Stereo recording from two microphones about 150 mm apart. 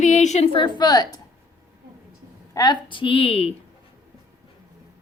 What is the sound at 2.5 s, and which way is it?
A woman's voice, 25° left (ahead or behind).